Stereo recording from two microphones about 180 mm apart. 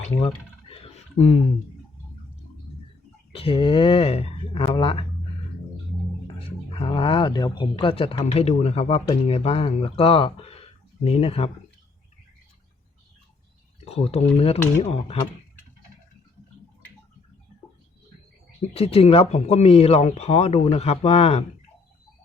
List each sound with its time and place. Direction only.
0.2 s a sound: 30° left (ahead or behind)
3.3 s speech: 30° left (ahead or behind)
6.2 s speech: 30° left (ahead or behind)
13.8 s speech: 35° left (ahead or behind)
18.7 s speech: 35° left (ahead or behind)